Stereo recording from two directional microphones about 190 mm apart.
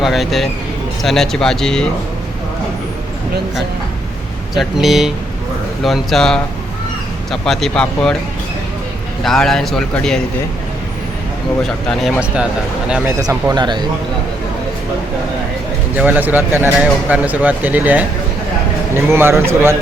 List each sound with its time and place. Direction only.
0.0 s a man's voice: centre (ahead or behind)
4.5 s a man's voice: centre (ahead or behind)
9.2 s a man's voice: centre (ahead or behind)
11.9 s a man's voice: centre (ahead or behind)
13.2 s speech: 20° right (ahead or behind)
16.0 s speech: 10° right (ahead or behind)